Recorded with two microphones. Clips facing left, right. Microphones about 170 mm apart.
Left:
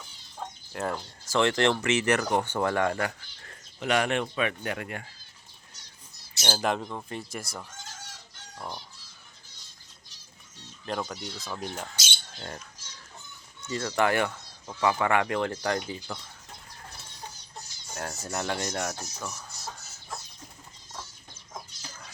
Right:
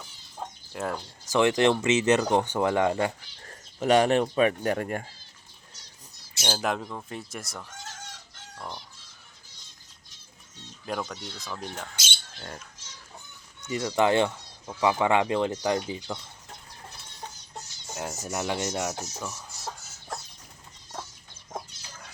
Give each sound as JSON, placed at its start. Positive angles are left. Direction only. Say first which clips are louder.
{"t": 0.3, "sound": "a sound", "louder": "even", "side_deg": 0}
{"t": 1.2, "sound": "speech", "louder": "right 3 dB", "side_deg": -15}
{"t": 3.4, "sound": "speech", "louder": "right 6 dB", "side_deg": -35}
{"t": 6.5, "sound": "speech", "louder": "left 1 dB", "side_deg": 0}
{"t": 8.5, "sound": "speech", "louder": "left 1 dB", "side_deg": 10}
{"t": 10.8, "sound": "speech", "louder": "even", "side_deg": 0}
{"t": 12.4, "sound": "speech", "louder": "left 2 dB", "side_deg": 0}
{"t": 13.6, "sound": "speech", "louder": "right 2 dB", "side_deg": -15}
{"t": 17.9, "sound": "speech", "louder": "right 1 dB", "side_deg": -15}